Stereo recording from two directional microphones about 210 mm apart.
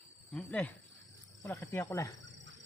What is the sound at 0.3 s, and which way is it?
Speech, 5° left (ahead or behind).